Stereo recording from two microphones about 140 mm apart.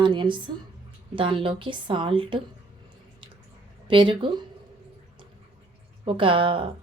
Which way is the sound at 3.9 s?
35° right (ahead or behind).